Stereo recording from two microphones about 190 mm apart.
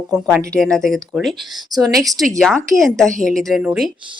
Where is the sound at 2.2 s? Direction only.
Centre (ahead or behind).